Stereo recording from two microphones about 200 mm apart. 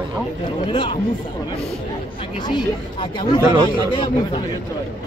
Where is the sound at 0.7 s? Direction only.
25° left (ahead or behind).